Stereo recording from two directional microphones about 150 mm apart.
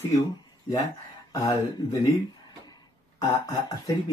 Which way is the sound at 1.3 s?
20° left (ahead or behind).